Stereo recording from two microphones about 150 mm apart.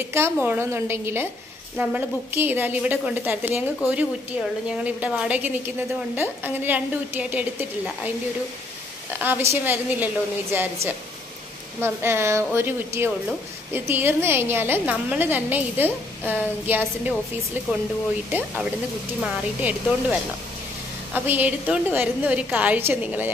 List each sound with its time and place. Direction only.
0.1 s a woman's voice: 15° right (ahead or behind)
9.2 s a woman's voice: 15° right (ahead or behind)
19.2 s a woman's voice: 10° right (ahead or behind)